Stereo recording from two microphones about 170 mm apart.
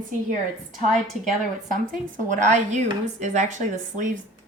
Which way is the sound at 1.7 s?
50° right (ahead or behind).